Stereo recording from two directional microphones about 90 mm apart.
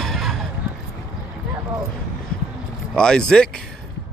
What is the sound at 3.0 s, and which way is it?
Speech, 10° left (ahead or behind).